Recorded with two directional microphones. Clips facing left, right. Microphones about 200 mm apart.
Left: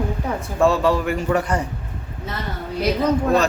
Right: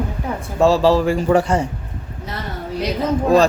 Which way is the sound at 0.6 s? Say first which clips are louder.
Right 4 dB; 30° right (ahead or behind).